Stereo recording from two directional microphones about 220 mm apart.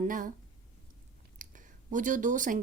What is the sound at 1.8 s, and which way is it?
Speech, 35° right (ahead or behind).